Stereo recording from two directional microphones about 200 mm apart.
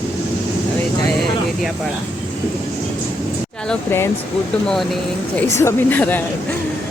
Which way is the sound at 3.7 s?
10° left (ahead or behind).